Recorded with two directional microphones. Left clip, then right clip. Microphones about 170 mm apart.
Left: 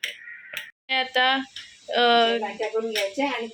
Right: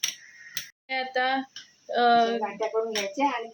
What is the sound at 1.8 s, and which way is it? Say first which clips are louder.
Speech: left 2 dB; centre (ahead or behind).